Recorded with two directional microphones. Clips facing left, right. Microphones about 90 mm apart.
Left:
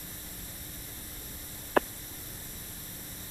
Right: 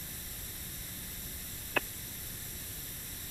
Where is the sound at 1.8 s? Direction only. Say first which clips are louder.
Left 9 dB; 35° left (ahead or behind).